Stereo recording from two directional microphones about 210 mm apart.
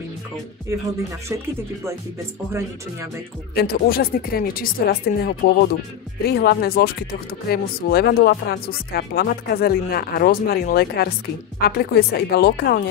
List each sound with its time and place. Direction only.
3.5 s speech: 45° left (ahead or behind)